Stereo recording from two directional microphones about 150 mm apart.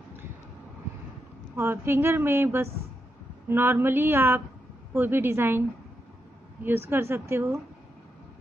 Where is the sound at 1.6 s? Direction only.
15° right (ahead or behind).